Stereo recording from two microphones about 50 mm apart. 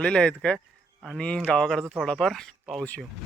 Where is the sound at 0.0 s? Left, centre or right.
Centre.